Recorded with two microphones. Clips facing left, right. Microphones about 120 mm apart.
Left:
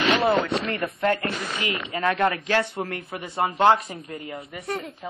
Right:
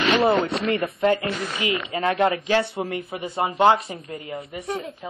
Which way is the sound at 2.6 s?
5° right (ahead or behind).